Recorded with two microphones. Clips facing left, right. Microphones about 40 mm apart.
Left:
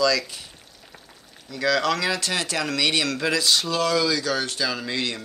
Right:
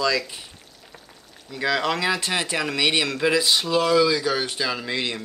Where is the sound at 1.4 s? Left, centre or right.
Centre.